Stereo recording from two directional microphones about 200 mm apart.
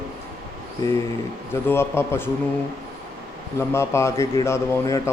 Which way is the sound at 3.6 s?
15° left (ahead or behind).